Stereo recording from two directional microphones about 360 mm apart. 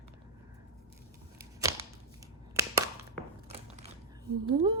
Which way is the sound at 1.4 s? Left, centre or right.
Centre.